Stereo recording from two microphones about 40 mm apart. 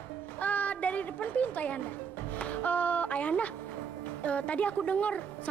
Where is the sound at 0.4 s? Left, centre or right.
Left.